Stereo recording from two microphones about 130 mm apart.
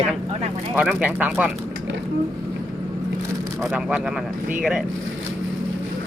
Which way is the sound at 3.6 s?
10° right (ahead or behind).